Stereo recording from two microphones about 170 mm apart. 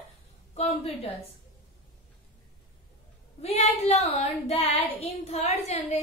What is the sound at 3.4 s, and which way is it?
Child singing, 40° left (ahead or behind).